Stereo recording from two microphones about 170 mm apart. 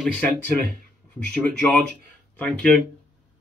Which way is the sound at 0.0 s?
10° left (ahead or behind).